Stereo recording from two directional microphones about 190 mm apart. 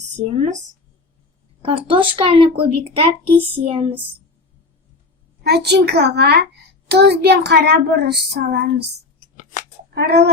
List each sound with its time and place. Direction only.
1.6 s speech: 25° right (ahead or behind)
5.4 s a child's voice: 60° right (ahead or behind)
9.2 s a sound: 40° left (ahead or behind)
9.9 s a child's voice: 60° right (ahead or behind)